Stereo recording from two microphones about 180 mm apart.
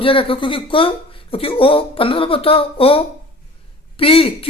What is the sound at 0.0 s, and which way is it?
Speech, 30° left (ahead or behind).